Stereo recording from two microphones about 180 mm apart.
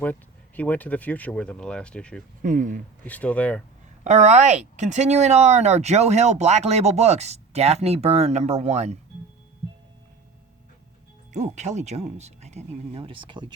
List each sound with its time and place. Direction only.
0.0 s speech: 10° left (ahead or behind)
2.4 s speech: 45° right (ahead or behind)
3.0 s speech: 10° left (ahead or behind)
4.0 s speech: 40° right (ahead or behind)
11.3 s speech: 40° right (ahead or behind)